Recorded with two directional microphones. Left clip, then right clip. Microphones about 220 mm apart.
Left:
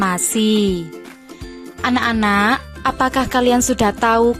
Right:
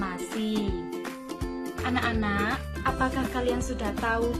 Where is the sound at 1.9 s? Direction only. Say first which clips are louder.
Left 12 dB; 50° left (ahead or behind).